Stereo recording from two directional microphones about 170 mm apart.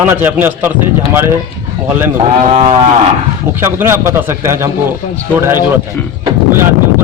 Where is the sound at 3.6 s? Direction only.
15° right (ahead or behind).